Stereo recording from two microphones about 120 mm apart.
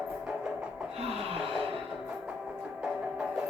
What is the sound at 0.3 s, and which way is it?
Music, 10° right (ahead or behind).